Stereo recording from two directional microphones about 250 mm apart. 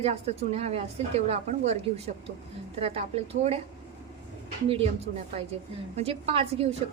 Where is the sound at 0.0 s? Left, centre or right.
Right.